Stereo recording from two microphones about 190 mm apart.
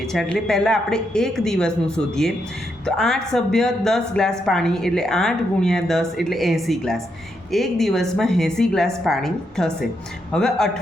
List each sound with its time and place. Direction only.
0.0 s speech: centre (ahead or behind)